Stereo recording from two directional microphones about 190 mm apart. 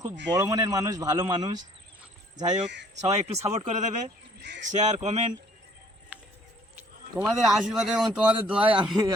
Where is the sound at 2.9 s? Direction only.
35° right (ahead or behind).